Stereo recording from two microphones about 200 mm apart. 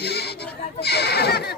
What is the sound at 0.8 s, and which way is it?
Neigh, 55° left (ahead or behind).